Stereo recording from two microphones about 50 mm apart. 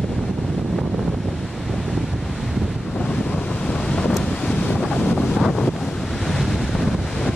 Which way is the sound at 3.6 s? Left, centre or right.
Centre.